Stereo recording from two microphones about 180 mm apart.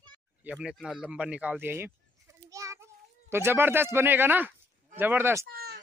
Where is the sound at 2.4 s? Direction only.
15° right (ahead or behind).